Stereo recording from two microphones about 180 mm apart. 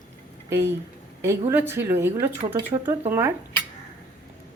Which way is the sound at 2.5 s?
25° right (ahead or behind).